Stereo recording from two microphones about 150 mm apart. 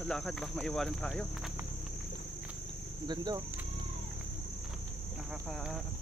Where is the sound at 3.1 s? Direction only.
30° right (ahead or behind).